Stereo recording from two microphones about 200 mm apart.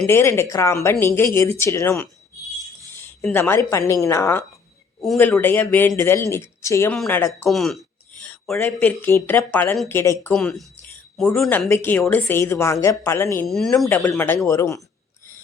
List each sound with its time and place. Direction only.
0.0 s speech: 10° left (ahead or behind)
3.2 s speech: 10° left (ahead or behind)
13.5 s speech: centre (ahead or behind)
13.8 s speech: 15° left (ahead or behind)